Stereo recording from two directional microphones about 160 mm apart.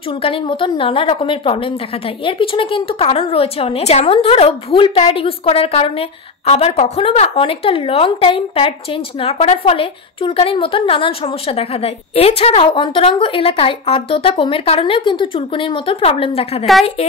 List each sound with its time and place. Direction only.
0.2 s a woman's voice: 35° left (ahead or behind)